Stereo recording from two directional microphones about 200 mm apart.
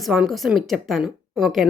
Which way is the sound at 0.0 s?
Centre (ahead or behind).